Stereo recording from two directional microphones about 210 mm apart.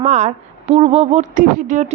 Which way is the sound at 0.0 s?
35° right (ahead or behind).